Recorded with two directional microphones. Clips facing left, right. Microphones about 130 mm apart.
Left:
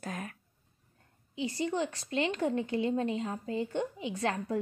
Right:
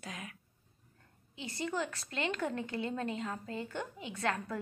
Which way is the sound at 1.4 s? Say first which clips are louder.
Left 7 dB; 30° right (ahead or behind).